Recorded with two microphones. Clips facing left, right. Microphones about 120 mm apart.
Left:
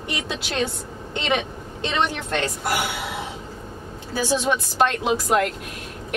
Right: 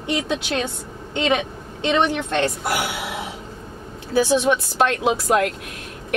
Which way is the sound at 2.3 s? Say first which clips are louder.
Right 3 dB; centre (ahead or behind).